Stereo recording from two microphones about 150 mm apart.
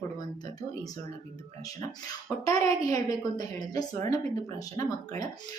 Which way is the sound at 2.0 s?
25° left (ahead or behind).